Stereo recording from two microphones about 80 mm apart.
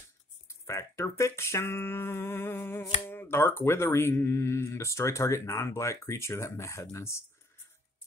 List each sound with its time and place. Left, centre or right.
0.5 s speech: left